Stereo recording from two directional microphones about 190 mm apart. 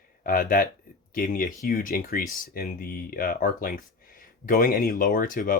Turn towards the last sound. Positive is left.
turn(degrees=45)  # may be behind; listen again after turning